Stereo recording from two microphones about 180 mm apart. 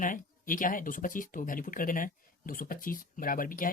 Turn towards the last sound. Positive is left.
turn(degrees=50)  # may be behind; listen again after turning